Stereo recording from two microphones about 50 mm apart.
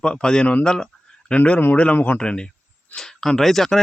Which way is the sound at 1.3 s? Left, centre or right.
Left.